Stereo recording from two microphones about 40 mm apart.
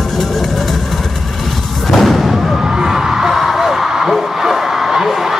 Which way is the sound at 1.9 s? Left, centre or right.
Centre.